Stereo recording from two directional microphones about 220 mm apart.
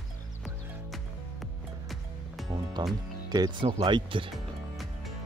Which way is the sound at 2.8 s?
20° right (ahead or behind).